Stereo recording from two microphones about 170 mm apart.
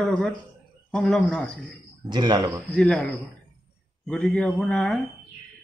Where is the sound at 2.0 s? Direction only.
25° right (ahead or behind).